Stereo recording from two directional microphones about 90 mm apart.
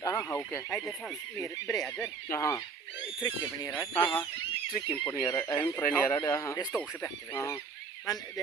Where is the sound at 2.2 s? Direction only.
35° left (ahead or behind).